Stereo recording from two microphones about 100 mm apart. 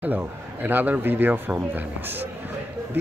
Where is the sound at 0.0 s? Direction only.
20° right (ahead or behind).